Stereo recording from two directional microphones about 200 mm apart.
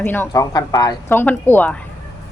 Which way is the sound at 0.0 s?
10° left (ahead or behind).